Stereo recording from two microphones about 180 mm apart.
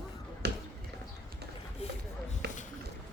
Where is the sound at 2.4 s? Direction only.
65° right (ahead or behind).